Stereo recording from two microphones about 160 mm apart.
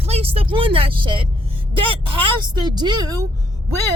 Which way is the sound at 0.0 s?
40° right (ahead or behind).